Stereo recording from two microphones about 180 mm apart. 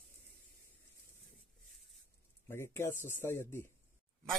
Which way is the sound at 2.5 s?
15° left (ahead or behind).